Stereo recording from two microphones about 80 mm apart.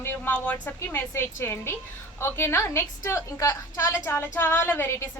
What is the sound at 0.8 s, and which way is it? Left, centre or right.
A woman's voice, left.